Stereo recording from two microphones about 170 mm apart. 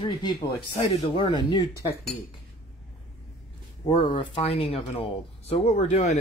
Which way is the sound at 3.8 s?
30° left (ahead or behind).